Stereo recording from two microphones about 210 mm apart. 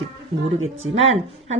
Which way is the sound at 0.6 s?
70° right (ahead or behind).